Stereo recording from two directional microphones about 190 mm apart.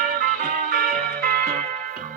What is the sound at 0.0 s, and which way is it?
Music, 50° right (ahead or behind).